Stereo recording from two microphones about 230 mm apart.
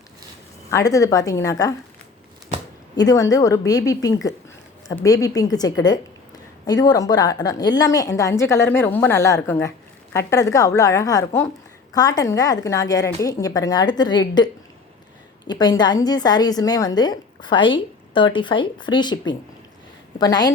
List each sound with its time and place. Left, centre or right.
0.7 s a woman's voice: centre
2.9 s a woman's voice: centre